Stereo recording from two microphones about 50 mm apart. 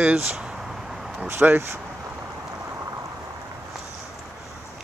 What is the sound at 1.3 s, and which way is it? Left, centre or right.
Speech, right.